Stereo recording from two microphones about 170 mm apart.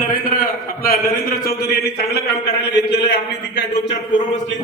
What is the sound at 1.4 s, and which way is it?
Speech, 70° left (ahead or behind).